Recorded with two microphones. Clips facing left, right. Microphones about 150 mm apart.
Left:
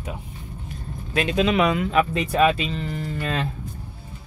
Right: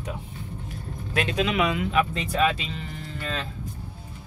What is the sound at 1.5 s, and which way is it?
Speech, 45° left (ahead or behind).